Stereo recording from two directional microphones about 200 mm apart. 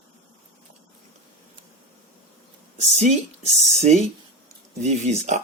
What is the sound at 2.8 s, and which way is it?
Speech, 35° right (ahead or behind).